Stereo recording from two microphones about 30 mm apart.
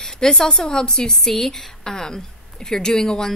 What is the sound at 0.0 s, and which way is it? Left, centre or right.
A woman's voice, left.